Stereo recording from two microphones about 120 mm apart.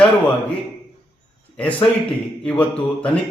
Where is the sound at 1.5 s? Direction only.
10° left (ahead or behind).